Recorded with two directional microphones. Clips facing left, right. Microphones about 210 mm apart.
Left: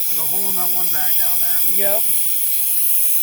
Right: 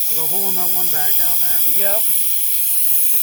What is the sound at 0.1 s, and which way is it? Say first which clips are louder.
Speech: right 4 dB; 40° right (ahead or behind).